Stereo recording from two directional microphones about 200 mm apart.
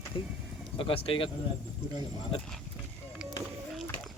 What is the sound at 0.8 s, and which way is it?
Speech, 25° left (ahead or behind).